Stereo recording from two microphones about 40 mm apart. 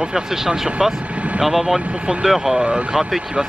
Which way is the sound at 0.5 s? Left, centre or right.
Right.